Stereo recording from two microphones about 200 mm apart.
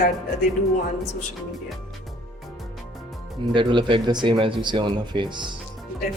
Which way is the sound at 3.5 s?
25° right (ahead or behind).